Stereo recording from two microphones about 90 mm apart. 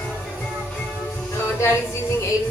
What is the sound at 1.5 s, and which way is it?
Music, 30° left (ahead or behind).